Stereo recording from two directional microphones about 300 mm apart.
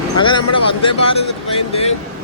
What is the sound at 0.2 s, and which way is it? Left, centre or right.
Speech, centre.